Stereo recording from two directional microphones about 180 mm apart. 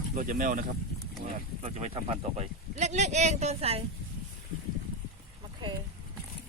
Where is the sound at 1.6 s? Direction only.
35° right (ahead or behind).